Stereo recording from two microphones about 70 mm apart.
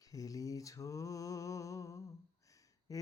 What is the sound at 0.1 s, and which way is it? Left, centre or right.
Mantra, left.